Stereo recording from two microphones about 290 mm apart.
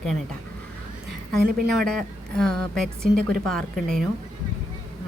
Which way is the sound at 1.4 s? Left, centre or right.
Right.